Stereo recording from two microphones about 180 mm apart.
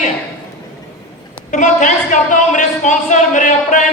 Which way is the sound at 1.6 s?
45° left (ahead or behind).